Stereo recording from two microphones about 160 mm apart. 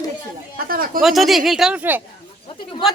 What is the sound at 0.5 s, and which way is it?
Cough, 65° right (ahead or behind).